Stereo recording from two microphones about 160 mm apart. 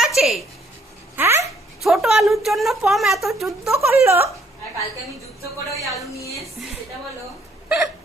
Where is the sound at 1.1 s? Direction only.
15° right (ahead or behind).